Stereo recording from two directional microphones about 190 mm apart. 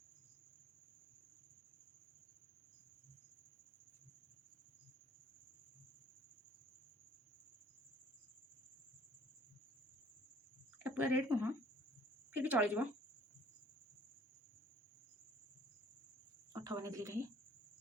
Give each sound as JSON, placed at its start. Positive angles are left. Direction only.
{"t": 10.8, "sound": "speech", "side_deg": -10}
{"t": 16.5, "sound": "cricket", "side_deg": -15}